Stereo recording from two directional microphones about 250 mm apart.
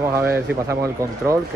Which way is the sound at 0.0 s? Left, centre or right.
Centre.